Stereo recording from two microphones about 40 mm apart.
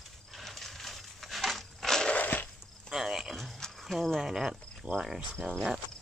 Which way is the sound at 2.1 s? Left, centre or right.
Left.